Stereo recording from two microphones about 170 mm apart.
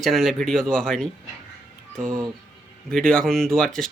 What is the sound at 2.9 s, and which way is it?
Speech, 5° left (ahead or behind).